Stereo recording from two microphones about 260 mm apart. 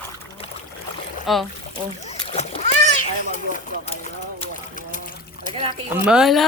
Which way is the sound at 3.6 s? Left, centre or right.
Left.